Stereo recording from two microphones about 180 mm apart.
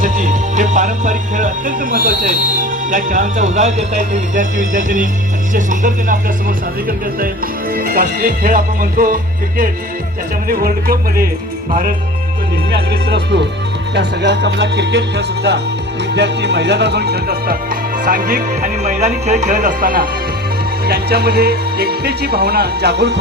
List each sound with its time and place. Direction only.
0.0 s music: 45° right (ahead or behind)
7.8 s music: 50° right (ahead or behind)
10.5 s speech: 55° right (ahead or behind)
11.7 s music: 50° right (ahead or behind)
13.1 s music: 70° right (ahead or behind)
16.1 s music: 70° right (ahead or behind)
18.0 s music: 50° right (ahead or behind)
20.8 s speech: 60° right (ahead or behind)